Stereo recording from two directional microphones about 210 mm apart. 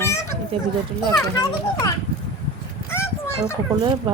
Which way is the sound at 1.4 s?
15° left (ahead or behind).